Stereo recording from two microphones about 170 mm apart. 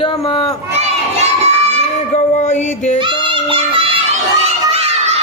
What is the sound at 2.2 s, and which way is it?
Music, 45° left (ahead or behind).